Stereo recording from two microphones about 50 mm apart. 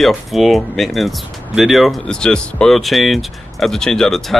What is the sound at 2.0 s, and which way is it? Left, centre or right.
Speech, centre.